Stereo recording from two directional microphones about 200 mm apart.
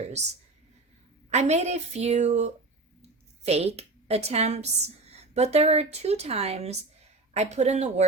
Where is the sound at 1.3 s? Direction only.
35° right (ahead or behind).